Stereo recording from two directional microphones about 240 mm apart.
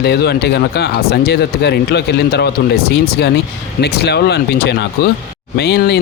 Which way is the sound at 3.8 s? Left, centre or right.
Left.